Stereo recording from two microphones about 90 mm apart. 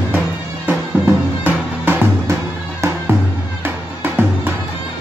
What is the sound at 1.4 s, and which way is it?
Music, 20° right (ahead or behind).